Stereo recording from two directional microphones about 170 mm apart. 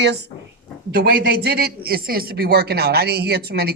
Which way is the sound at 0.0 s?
85° right.